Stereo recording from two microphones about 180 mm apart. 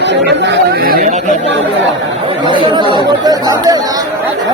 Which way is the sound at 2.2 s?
25° right (ahead or behind).